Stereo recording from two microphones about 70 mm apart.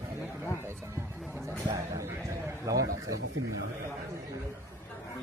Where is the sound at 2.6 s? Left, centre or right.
Right.